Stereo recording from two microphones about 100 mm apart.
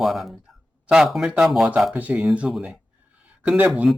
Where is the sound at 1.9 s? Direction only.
15° right (ahead or behind).